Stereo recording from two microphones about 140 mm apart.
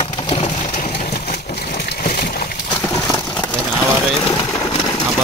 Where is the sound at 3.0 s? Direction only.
10° left (ahead or behind).